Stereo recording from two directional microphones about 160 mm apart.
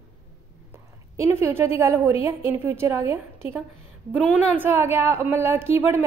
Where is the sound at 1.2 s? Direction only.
15° right (ahead or behind).